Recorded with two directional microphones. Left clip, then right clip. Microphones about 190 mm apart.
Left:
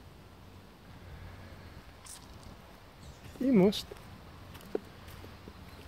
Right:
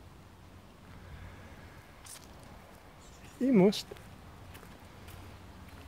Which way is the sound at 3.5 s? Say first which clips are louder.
Right 1 dB; 10° right (ahead or behind).